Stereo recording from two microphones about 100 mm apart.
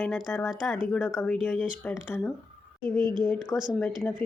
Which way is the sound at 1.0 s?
20° left (ahead or behind).